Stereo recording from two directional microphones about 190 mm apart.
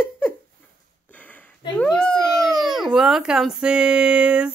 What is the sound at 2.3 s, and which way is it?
Speech, centre (ahead or behind).